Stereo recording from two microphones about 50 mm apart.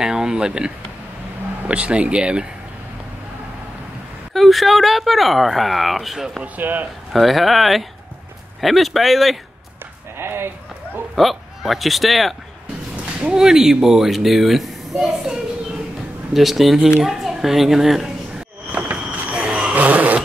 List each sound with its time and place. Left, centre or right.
0.0 s speech: centre
4.3 s speech: centre
6.4 s speech: right
7.1 s speech: centre
10.1 s a sound: right
11.1 s speech: centre
12.9 s speech: right; by 15.3 s centre
16.3 s a woman's voice: centre
18.7 s a sound: right
19.3 s vehicle: centre
19.7 s vehicle: right